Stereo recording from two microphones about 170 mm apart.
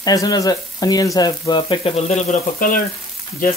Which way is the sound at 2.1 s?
45° left (ahead or behind).